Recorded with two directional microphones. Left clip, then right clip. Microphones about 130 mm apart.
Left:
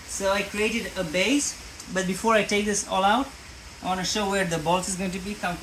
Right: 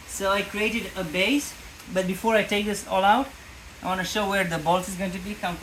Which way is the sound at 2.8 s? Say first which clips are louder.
Right 3 dB; 15° right (ahead or behind).